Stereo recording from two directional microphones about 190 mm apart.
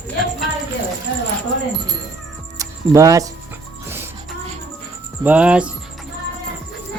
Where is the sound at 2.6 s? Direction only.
15° right (ahead or behind).